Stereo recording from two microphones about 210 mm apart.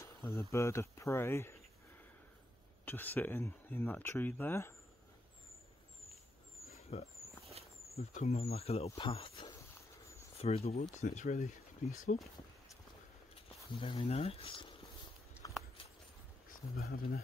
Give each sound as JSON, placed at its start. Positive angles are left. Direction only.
{"t": 0.0, "sound": "speech", "side_deg": 15}
{"t": 2.8, "sound": "speech", "side_deg": 10}
{"t": 6.9, "sound": "speech", "side_deg": 30}
{"t": 13.7, "sound": "speech", "side_deg": 25}
{"t": 15.4, "sound": "a sound", "side_deg": 20}
{"t": 16.4, "sound": "speech", "side_deg": 45}